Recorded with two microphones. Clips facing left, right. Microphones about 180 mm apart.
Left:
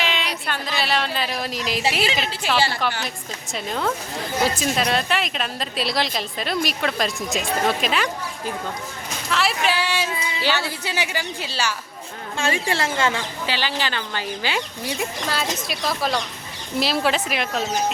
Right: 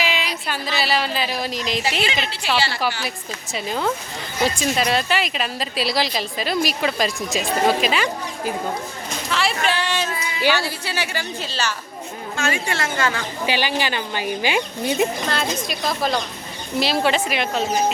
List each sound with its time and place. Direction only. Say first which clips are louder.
0.0 s speech: right 1 dB; 5° right (ahead or behind)
2.4 s a woman's voice: even; 45° left (ahead or behind)
2.8 s a woman's voice: right 1 dB; 5° right (ahead or behind)
9.3 s a woman's voice: even; centre (ahead or behind)
12.4 s a woman's voice: left 1 dB; 30° left (ahead or behind)
13.4 s speech: right 5 dB; 15° right (ahead or behind)
15.3 s a woman's voice: right 2 dB; 5° left (ahead or behind)